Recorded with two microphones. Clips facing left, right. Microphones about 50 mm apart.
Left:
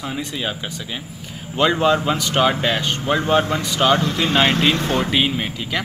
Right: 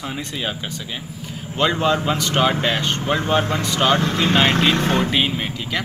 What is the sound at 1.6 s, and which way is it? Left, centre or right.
Speech, centre.